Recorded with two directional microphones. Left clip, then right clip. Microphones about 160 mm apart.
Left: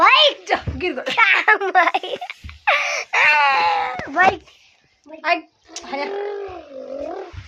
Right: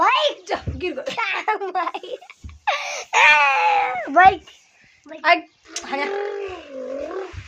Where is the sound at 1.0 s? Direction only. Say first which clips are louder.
Left 9 dB; centre (ahead or behind).